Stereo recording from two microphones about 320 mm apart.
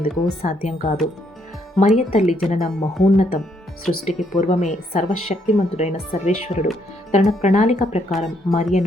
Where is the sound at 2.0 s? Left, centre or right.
Left.